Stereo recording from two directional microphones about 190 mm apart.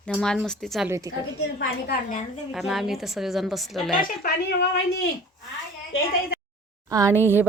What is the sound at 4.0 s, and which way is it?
Speech, 60° left (ahead or behind).